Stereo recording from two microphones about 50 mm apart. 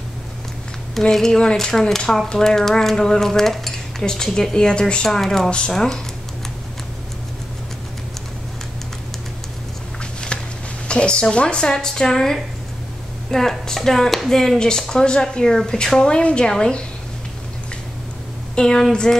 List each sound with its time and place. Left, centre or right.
1.1 s speech: centre
10.3 s a sound: left
10.9 s speech: centre
18.5 s speech: centre